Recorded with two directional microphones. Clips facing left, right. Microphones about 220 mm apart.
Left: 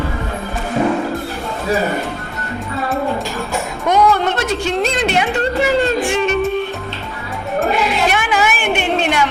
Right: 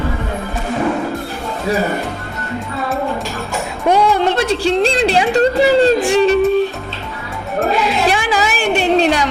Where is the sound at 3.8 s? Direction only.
30° right (ahead or behind).